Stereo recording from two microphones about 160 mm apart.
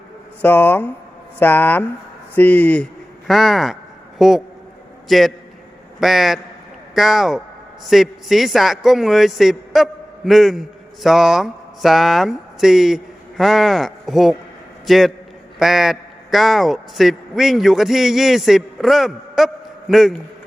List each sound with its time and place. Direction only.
0.4 s a man's voice: 10° left (ahead or behind)